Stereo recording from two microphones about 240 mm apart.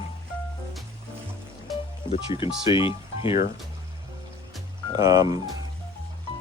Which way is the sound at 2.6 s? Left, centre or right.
Left.